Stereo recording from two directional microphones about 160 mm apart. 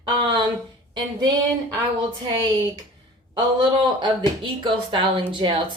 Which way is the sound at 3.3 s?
30° right (ahead or behind).